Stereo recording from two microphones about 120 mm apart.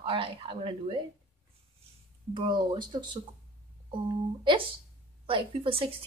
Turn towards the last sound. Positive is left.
turn(degrees=-50)  # may be behind; listen again after turning